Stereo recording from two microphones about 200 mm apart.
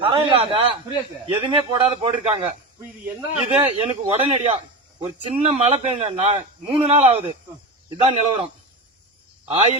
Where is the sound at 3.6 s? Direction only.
25° right (ahead or behind).